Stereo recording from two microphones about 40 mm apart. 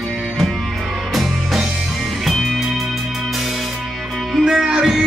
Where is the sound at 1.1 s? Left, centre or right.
Centre.